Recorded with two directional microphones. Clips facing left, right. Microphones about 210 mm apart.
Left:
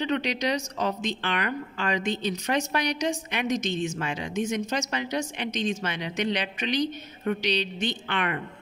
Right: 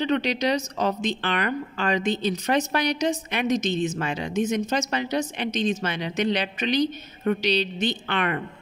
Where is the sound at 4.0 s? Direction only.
35° right (ahead or behind).